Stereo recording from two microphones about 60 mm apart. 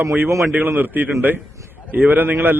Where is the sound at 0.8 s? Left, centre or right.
Right.